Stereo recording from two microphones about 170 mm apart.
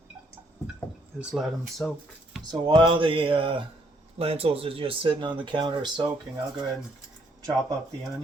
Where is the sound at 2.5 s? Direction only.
30° right (ahead or behind).